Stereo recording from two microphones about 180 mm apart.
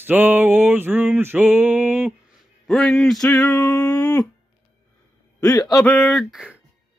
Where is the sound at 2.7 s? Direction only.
Centre (ahead or behind).